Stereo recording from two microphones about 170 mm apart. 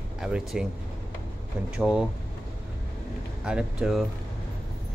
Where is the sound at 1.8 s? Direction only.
5° right (ahead or behind).